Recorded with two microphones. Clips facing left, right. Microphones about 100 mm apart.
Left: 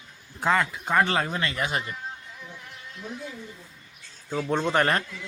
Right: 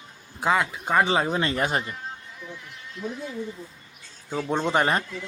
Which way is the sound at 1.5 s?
35° right (ahead or behind).